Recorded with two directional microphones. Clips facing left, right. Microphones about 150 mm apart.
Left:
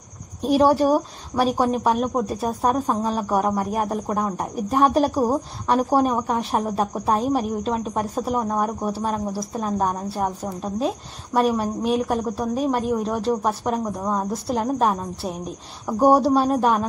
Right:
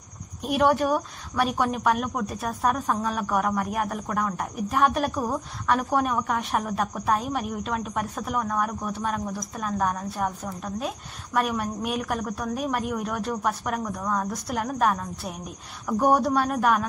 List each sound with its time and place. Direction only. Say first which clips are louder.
0.4 s a woman's voice: left 5 dB; 30° left (ahead or behind)